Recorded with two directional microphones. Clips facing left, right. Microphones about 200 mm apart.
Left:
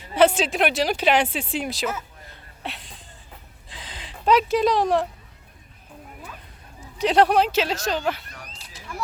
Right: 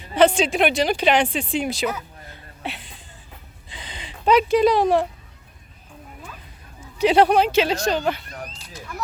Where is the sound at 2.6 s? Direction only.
Centre (ahead or behind).